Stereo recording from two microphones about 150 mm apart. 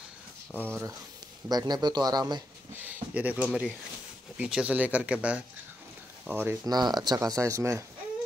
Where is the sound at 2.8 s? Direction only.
10° right (ahead or behind).